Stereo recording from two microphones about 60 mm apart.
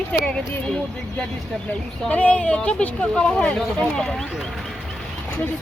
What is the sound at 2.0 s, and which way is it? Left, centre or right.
Speech, left.